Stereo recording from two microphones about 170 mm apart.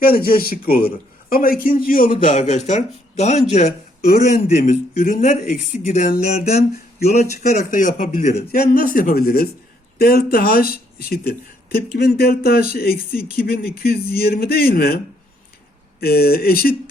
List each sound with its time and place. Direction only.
0.0 s speech: 60° left (ahead or behind)
2.2 s speech: 45° left (ahead or behind)
4.0 s speech: 60° left (ahead or behind)
7.7 s speech: 50° left (ahead or behind)
8.5 s speech: 55° left (ahead or behind)
16.0 s speech: 65° left (ahead or behind)